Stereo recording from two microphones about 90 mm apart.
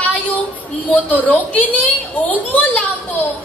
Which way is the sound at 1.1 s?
20° left (ahead or behind).